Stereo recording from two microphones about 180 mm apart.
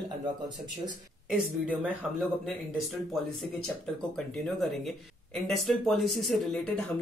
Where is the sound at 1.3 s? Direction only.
5° right (ahead or behind).